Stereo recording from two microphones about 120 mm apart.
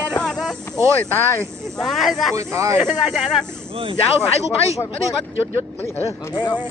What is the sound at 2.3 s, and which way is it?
Speech, 25° right (ahead or behind).